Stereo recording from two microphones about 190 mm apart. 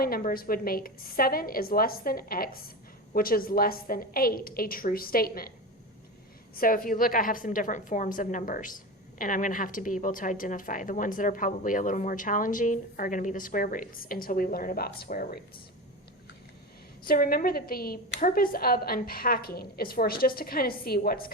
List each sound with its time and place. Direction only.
0.0 s a woman's voice: 50° left (ahead or behind)
6.6 s a woman's voice: 50° left (ahead or behind)
17.0 s a woman's voice: 50° left (ahead or behind)